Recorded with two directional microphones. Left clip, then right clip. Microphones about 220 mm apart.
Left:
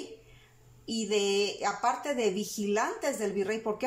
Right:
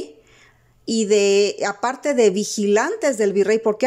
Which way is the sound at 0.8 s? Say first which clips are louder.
Right 12 dB; 45° right (ahead or behind).